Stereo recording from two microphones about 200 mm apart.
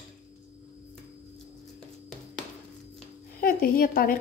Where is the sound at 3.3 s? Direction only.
45° left (ahead or behind).